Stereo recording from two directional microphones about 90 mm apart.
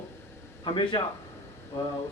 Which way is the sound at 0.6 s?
60° left (ahead or behind).